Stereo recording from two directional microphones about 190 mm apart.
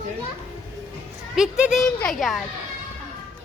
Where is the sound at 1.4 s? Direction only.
5° right (ahead or behind).